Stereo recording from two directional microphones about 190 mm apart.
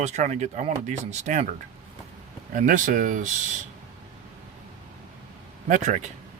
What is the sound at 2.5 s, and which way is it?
Speech, 45° right (ahead or behind).